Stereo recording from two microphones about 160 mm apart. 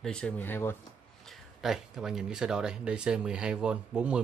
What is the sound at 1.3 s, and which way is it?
Speech, centre (ahead or behind).